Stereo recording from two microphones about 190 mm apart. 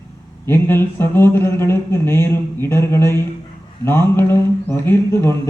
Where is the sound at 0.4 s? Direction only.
10° left (ahead or behind).